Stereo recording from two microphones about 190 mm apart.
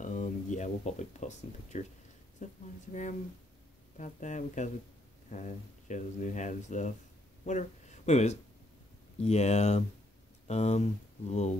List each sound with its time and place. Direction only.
0.0 s speech: 40° left (ahead or behind)